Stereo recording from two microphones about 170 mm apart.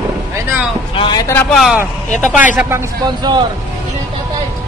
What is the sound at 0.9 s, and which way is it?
Speech, 30° left (ahead or behind).